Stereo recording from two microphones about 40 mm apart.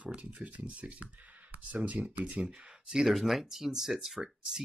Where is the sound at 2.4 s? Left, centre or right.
Centre.